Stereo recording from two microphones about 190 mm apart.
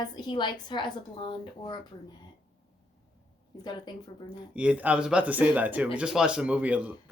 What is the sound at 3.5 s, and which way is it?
Speech, 20° left (ahead or behind).